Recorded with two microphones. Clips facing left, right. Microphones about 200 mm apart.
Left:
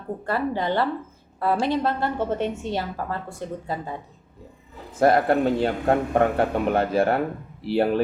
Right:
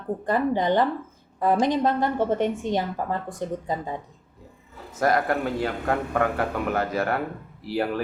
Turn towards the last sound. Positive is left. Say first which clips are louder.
# left 5 dB
turn(degrees=25)  # may be behind; listen again after turning